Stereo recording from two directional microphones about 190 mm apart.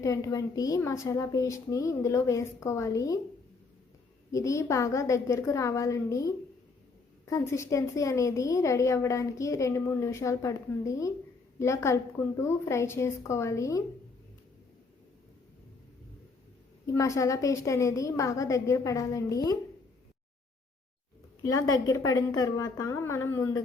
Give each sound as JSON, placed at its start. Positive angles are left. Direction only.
{"t": 0.0, "sound": "a woman's voice", "side_deg": 15}
{"t": 4.3, "sound": "a woman's voice", "side_deg": 15}
{"t": 16.8, "sound": "a woman's voice", "side_deg": 15}
{"t": 21.4, "sound": "a woman's voice", "side_deg": 20}